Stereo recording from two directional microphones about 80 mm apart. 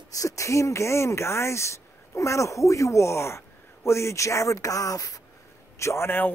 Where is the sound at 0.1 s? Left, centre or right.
Left.